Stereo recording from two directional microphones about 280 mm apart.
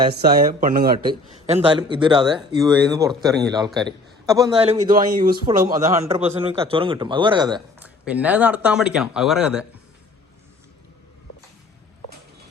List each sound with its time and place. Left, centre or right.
0.1 s speech: right
1.5 s speech: right
5.5 s speech: centre